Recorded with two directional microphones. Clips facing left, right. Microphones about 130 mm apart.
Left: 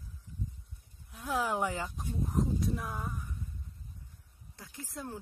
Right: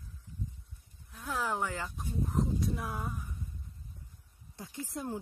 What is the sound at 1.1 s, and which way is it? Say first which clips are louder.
Speech: left 2 dB; 15° left (ahead or behind).